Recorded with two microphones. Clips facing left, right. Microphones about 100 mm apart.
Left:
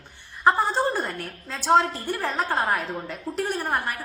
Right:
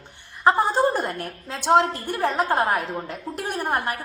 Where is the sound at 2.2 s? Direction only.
15° right (ahead or behind).